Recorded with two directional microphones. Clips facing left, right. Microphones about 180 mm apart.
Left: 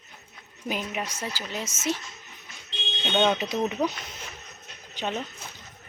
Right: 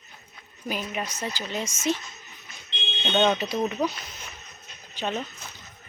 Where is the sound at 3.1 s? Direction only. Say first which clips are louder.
Right 1 dB; 10° left (ahead or behind).